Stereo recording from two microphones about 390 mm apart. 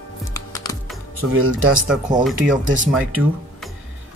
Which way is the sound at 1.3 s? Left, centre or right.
Right.